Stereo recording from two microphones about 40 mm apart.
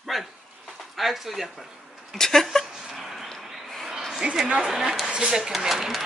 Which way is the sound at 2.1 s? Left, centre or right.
Centre.